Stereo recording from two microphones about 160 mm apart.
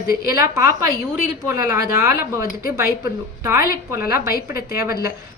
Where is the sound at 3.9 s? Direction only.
70° left (ahead or behind).